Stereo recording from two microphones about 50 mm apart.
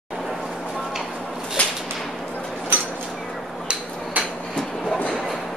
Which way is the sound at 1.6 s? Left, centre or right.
Left.